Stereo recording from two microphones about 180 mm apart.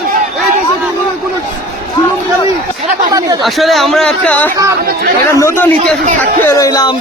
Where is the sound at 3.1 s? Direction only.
20° right (ahead or behind).